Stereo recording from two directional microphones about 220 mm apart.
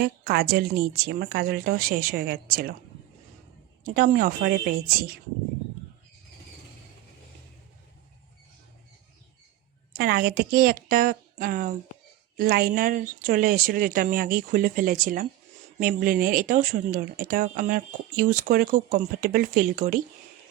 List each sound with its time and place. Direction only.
0.0 s a woman's voice: 45° right (ahead or behind)
3.8 s speech: 40° right (ahead or behind)
10.0 s speech: 45° right (ahead or behind)